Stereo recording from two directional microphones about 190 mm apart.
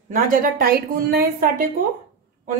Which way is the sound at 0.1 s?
50° right (ahead or behind).